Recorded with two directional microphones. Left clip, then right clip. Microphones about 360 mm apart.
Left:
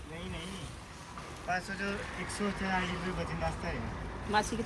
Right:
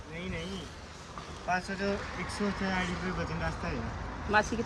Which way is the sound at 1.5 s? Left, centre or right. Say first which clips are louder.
Right 3 dB; centre.